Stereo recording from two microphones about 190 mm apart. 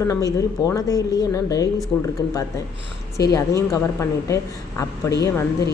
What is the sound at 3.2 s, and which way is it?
Speech, 20° left (ahead or behind).